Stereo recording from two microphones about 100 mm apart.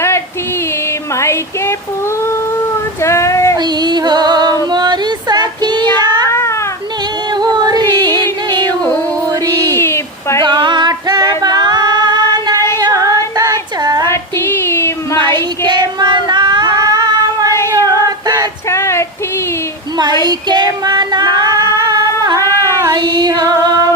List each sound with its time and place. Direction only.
1.2 s a sound: 25° left (ahead or behind)
3.0 s child singing: 30° left (ahead or behind)
3.6 s music: 45° right (ahead or behind)
4.7 s child singing: 45° right (ahead or behind)
7.3 s music: 45° right (ahead or behind)
9.7 s a sound: 25° left (ahead or behind)
10.4 s female singing: 50° right (ahead or behind)
14.1 s child singing: 25° left (ahead or behind)
15.2 s child singing: 45° right (ahead or behind)
17.7 s female singing: 40° right (ahead or behind)
18.7 s female singing: 25° left (ahead or behind)
20.2 s female singing: 45° right (ahead or behind)